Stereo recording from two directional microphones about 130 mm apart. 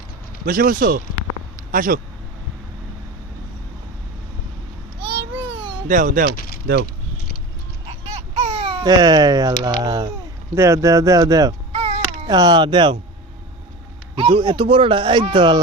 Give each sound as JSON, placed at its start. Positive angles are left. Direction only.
{"t": 0.4, "sound": "speech", "side_deg": -90}
{"t": 5.0, "sound": "babbling", "side_deg": -40}
{"t": 5.9, "sound": "speech", "side_deg": -90}
{"t": 8.4, "sound": "baby cry", "side_deg": -50}
{"t": 8.8, "sound": "speech", "side_deg": -30}
{"t": 11.7, "sound": "a sound", "side_deg": -55}
{"t": 12.3, "sound": "speech", "side_deg": -35}
{"t": 14.2, "sound": "speech", "side_deg": -40}